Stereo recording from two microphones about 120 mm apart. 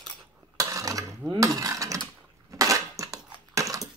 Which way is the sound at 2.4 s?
25° right (ahead or behind).